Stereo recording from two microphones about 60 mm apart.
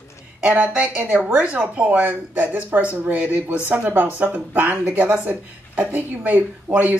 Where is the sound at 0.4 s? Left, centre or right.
Right.